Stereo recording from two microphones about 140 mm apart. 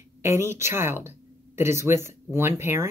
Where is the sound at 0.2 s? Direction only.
20° right (ahead or behind).